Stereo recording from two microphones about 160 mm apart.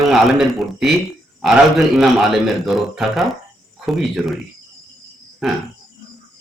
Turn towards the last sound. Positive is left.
turn(degrees=0)  # may be behind; listen again after turning